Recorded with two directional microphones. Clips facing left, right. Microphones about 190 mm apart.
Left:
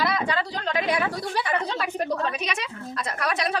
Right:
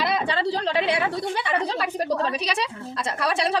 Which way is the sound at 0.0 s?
25° right (ahead or behind).